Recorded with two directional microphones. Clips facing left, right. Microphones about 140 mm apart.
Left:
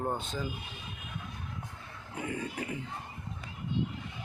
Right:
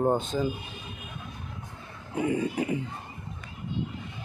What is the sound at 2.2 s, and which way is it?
Speech, 20° right (ahead or behind).